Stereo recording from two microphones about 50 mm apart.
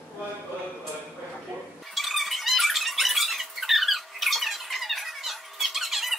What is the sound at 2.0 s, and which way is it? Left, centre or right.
Squeak, centre.